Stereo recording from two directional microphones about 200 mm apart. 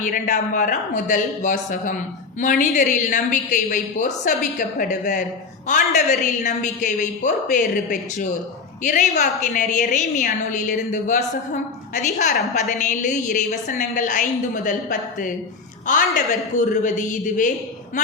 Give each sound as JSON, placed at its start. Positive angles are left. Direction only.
{"t": 0.0, "sound": "a woman's voice", "side_deg": 40}